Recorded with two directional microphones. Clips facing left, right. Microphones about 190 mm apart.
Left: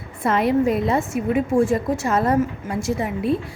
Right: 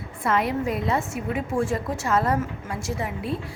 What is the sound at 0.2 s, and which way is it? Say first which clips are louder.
A woman's voice: left 6 dB; 25° left (ahead or behind).